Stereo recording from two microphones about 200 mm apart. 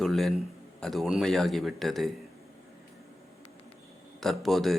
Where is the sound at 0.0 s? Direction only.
Centre (ahead or behind).